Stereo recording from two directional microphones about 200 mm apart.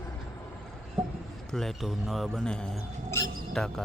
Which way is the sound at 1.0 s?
5° right (ahead or behind).